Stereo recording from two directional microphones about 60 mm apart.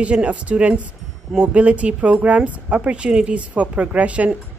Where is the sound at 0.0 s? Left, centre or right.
Centre.